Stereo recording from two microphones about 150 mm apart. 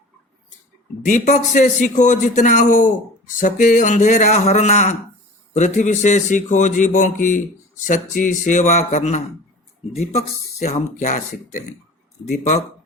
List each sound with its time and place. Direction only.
1.0 s a man's voice: 55° left (ahead or behind)